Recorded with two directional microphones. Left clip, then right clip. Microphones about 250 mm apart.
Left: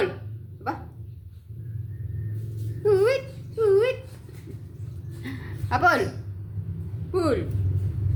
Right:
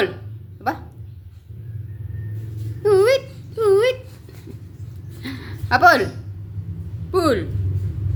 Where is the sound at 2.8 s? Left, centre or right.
Right.